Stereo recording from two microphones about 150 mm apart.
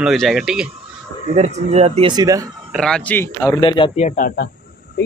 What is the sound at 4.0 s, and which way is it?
Speech, 65° left (ahead or behind).